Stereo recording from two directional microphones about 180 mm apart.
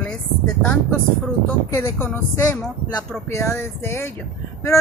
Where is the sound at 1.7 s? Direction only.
15° left (ahead or behind).